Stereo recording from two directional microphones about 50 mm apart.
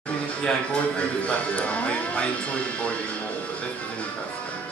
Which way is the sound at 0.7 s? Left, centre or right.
Left.